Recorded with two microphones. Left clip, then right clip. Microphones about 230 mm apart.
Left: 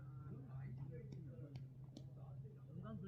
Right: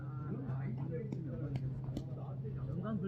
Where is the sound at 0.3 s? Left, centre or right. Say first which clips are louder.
Right 15 dB; left.